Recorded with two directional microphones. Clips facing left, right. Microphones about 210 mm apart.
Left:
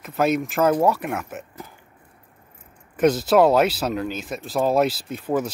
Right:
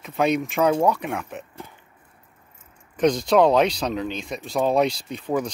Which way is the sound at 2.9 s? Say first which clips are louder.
Left 1 dB; 5° left (ahead or behind).